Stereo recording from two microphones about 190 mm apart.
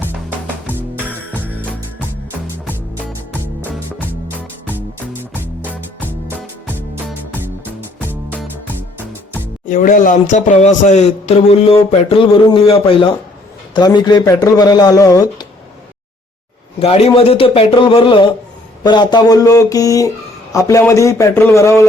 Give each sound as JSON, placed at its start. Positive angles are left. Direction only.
{"t": 0.0, "sound": "music", "side_deg": -10}
{"t": 0.8, "sound": "music", "side_deg": 10}
{"t": 5.2, "sound": "music", "side_deg": -10}
{"t": 8.0, "sound": "music", "side_deg": -10}
{"t": 9.6, "sound": "speech", "side_deg": 45}
{"t": 16.8, "sound": "a man's voice", "side_deg": 30}